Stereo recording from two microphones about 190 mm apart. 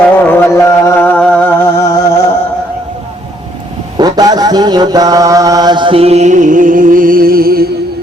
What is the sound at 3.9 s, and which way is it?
Mantra, 20° right (ahead or behind).